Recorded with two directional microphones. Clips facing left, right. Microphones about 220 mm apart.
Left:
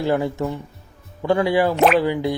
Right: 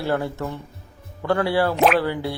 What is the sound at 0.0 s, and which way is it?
A man's voice, 15° left (ahead or behind).